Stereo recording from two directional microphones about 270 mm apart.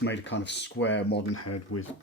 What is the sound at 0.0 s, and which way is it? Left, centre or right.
Speech, left.